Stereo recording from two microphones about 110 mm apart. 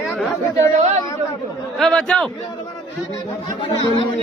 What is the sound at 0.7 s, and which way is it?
Speech, 90° right.